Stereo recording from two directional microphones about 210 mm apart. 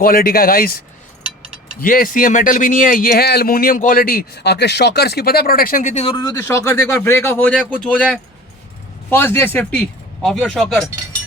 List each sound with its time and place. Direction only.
0.0 s speech: 45° left (ahead or behind)
1.8 s speech: 40° left (ahead or behind); by 10.8 s centre (ahead or behind)